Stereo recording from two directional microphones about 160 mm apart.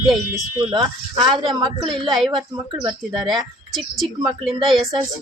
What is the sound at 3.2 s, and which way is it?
Speech, centre (ahead or behind).